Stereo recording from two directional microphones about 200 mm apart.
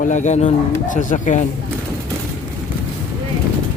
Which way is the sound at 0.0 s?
40° left (ahead or behind).